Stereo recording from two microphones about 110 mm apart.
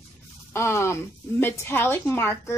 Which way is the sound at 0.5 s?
25° left (ahead or behind).